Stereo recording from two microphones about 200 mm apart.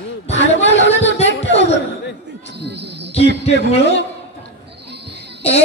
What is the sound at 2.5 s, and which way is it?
Cricket, 60° right (ahead or behind).